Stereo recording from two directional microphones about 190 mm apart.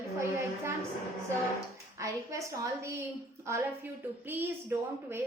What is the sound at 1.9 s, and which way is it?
A woman's voice, 15° right (ahead or behind).